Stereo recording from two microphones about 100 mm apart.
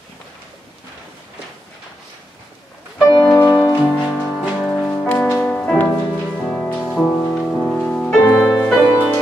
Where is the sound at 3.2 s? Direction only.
25° left (ahead or behind).